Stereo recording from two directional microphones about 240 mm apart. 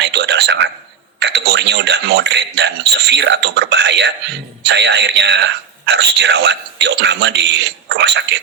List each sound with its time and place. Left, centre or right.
0.0 s a man's voice: right